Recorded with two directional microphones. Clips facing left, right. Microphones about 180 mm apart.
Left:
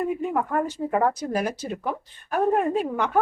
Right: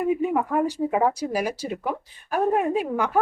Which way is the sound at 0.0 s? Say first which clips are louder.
Right 3 dB; 5° right (ahead or behind).